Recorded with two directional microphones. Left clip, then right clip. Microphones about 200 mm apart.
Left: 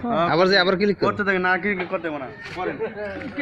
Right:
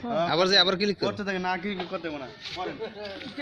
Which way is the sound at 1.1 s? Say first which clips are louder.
Left 9 dB; 50° right (ahead or behind).